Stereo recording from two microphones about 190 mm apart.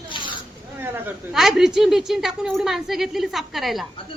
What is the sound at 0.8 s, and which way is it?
Speech, 5° right (ahead or behind).